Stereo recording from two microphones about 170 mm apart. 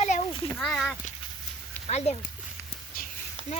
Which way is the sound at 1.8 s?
40° left (ahead or behind).